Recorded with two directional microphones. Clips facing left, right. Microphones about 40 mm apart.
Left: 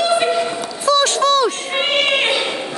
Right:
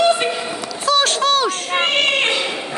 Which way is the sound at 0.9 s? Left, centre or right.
Right.